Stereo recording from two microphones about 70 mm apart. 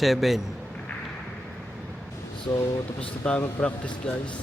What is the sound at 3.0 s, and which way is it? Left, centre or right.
Speech, centre.